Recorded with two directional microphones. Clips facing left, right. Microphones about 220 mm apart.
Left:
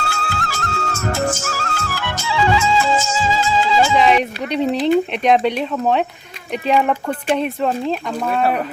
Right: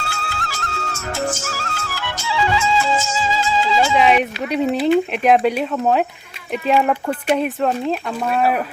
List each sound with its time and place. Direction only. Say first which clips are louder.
0.1 s music: left 3 dB; 50° left (ahead or behind)
3.9 s speech: even; 5° right (ahead or behind)